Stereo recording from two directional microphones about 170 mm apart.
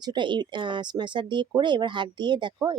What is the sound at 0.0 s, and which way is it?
A woman's voice, 25° right (ahead or behind).